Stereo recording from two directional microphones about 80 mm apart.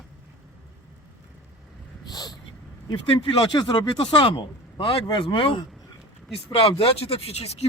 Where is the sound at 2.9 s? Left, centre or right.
Left.